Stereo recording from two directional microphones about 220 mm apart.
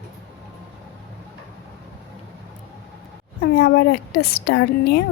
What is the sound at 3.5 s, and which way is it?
Speech, 45° left (ahead or behind).